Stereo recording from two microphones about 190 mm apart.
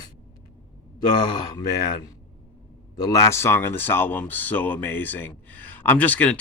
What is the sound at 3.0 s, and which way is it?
Speech, 20° left (ahead or behind).